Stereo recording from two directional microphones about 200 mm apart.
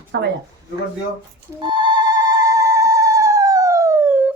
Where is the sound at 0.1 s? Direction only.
60° right (ahead or behind).